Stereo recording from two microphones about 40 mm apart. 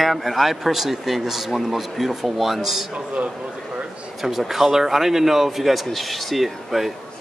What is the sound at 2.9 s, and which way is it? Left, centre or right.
Speech, right.